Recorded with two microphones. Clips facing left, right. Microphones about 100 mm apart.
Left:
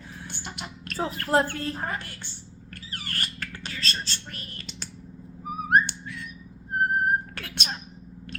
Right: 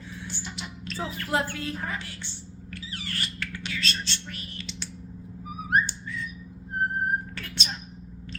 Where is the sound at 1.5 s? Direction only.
40° left (ahead or behind).